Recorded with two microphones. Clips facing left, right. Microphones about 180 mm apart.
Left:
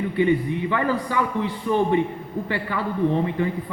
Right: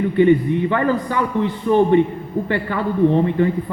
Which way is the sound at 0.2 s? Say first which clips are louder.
Right 6 dB; 50° right (ahead or behind).